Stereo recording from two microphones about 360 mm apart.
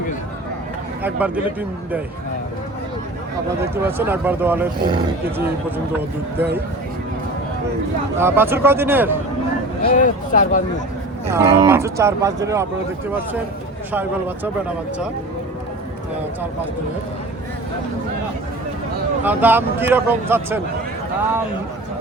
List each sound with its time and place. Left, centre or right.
1.0 s speech: centre
3.6 s speech: centre
8.2 s speech: centre
9.8 s speech: left
11.3 s speech: centre
13.9 s speech: centre
19.2 s speech: centre